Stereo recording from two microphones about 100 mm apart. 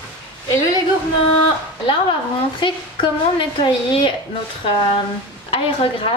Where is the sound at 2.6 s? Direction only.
55° left (ahead or behind).